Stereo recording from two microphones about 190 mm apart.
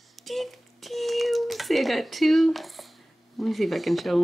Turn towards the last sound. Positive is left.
turn(degrees=0)  # may be behind; listen again after turning